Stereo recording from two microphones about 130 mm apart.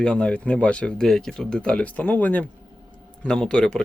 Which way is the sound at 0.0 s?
5° left (ahead or behind).